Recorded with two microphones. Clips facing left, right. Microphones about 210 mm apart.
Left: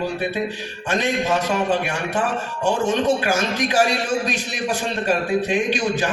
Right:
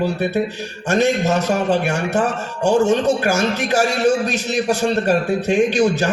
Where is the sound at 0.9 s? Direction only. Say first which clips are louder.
Right 4 dB; 45° right (ahead or behind).